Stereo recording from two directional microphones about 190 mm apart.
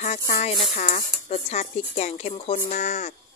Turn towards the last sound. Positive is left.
turn(degrees=40)  # may be behind; listen again after turning